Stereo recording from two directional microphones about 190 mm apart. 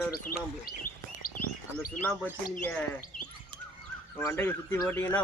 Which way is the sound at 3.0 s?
40° left (ahead or behind).